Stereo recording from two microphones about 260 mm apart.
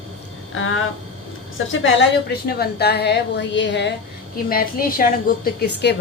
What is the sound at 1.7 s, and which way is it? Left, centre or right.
A woman's voice, left.